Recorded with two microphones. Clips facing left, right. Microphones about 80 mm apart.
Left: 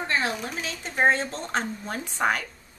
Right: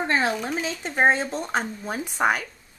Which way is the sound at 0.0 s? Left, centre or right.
Right.